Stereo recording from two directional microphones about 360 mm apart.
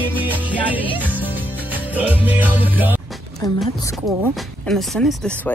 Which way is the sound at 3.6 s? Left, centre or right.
Centre.